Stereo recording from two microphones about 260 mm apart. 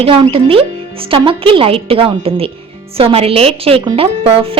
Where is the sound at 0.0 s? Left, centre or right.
Right.